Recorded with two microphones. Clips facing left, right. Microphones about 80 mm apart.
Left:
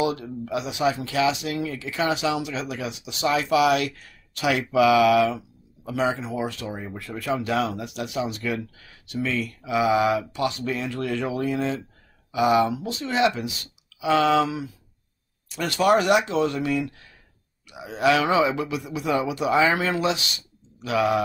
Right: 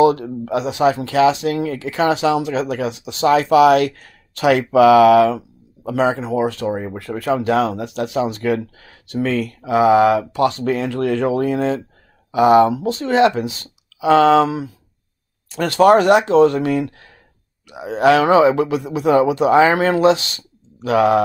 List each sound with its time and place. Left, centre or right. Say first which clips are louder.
0.0 s speech: right 11 dB; right